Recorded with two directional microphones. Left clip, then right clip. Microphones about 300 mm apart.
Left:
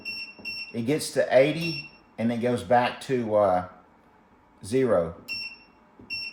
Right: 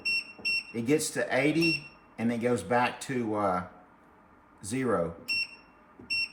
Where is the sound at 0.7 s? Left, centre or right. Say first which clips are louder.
Left 3 dB; centre.